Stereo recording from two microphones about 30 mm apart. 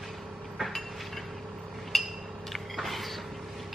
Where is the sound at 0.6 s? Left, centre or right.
Centre.